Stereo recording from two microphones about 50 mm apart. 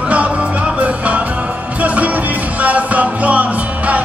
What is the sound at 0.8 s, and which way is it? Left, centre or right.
Music, right.